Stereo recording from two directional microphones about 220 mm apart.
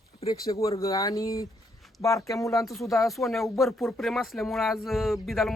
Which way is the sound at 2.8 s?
Centre (ahead or behind).